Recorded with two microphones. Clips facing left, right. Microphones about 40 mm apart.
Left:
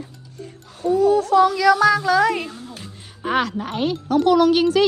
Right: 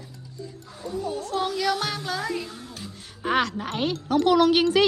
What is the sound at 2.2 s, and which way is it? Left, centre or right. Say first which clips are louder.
Speech: left 10 dB; left.